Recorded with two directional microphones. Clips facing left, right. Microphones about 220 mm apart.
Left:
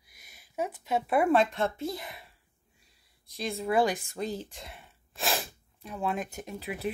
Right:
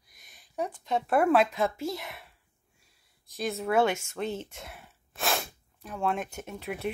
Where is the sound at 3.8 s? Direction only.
35° left (ahead or behind).